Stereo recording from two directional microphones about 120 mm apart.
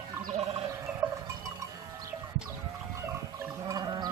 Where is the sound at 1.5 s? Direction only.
25° right (ahead or behind).